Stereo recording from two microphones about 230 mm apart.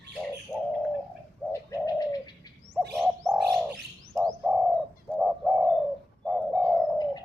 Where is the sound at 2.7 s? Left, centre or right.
Centre.